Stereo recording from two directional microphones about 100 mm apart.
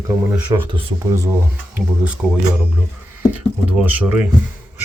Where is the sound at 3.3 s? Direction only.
15° right (ahead or behind).